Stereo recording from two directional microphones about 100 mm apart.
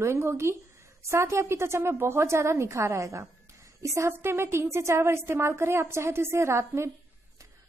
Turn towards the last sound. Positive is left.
turn(degrees=-25)  # may be behind; listen again after turning